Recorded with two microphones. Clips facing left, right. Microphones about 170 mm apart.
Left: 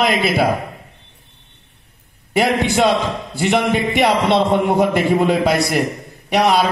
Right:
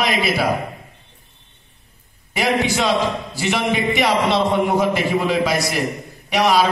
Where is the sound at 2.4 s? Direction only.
55° left (ahead or behind).